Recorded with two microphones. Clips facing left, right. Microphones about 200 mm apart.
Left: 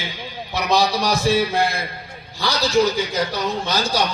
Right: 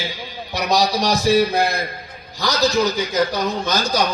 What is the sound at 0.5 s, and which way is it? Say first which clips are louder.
A man's voice: even; 40° right (ahead or behind).